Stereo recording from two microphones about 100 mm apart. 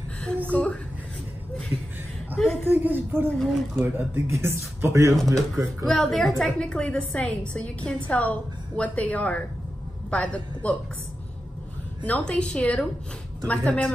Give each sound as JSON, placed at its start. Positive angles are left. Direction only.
{"t": 0.5, "sound": "a woman's voice", "side_deg": 15}
{"t": 2.6, "sound": "speech", "side_deg": -20}
{"t": 3.3, "sound": "speech", "side_deg": 5}
{"t": 3.8, "sound": "speech", "side_deg": -25}
{"t": 5.9, "sound": "a woman's voice", "side_deg": 5}
{"t": 12.0, "sound": "a woman's voice", "side_deg": 10}